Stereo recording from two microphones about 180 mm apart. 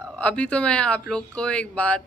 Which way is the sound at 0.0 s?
5° left (ahead or behind).